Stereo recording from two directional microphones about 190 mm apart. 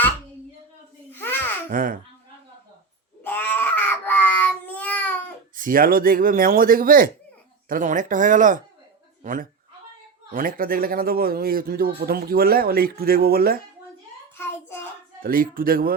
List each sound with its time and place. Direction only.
1.1 s babbling: 10° left (ahead or behind)
1.7 s speech: 45° right (ahead or behind)
3.2 s baby cry: 10° left (ahead or behind)
5.5 s speech: 45° right (ahead or behind)
15.2 s speech: 50° right (ahead or behind)